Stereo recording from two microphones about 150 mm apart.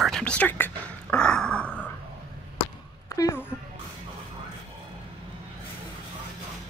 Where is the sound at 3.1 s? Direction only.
20° left (ahead or behind).